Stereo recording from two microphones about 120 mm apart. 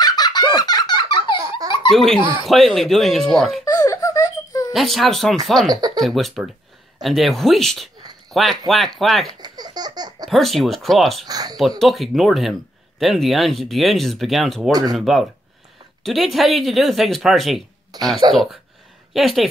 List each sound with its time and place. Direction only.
0.0 s fowl: 35° left (ahead or behind)
1.9 s speech: 5° left (ahead or behind)
3.6 s giggle: 30° left (ahead or behind)
4.7 s speech: centre (ahead or behind)
5.7 s speech: 35° right (ahead or behind)
5.9 s speech: centre (ahead or behind)
9.3 s laughter: 35° right (ahead or behind)
10.2 s speech: centre (ahead or behind)
11.2 s speech: 30° right (ahead or behind)
11.8 s speech: centre (ahead or behind)
14.7 s speech: 35° right (ahead or behind)
15.0 s speech: centre (ahead or behind)
17.9 s speech: 35° right (ahead or behind)
18.3 s speech: centre (ahead or behind)